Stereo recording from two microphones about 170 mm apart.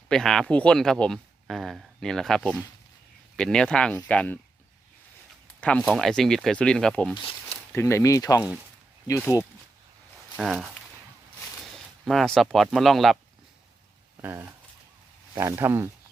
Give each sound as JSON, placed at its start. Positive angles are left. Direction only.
{"t": 0.1, "sound": "speech", "side_deg": 0}
{"t": 5.5, "sound": "speech", "side_deg": 5}
{"t": 10.3, "sound": "speech", "side_deg": 0}
{"t": 12.0, "sound": "speech", "side_deg": 0}
{"t": 14.2, "sound": "speech", "side_deg": -15}